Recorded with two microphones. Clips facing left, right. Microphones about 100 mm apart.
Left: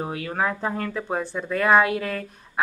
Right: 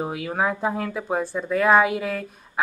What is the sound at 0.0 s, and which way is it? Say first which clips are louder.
Speech: right 1 dB; 5° right (ahead or behind).